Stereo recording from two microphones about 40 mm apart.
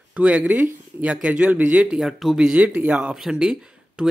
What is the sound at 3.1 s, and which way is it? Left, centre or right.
Speech, centre.